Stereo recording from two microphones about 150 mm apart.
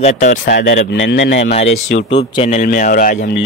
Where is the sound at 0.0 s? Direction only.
60° left (ahead or behind).